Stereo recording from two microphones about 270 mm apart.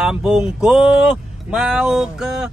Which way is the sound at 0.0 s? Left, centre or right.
Centre.